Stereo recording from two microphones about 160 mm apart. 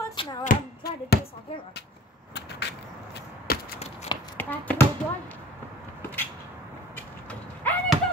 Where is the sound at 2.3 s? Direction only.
90° left.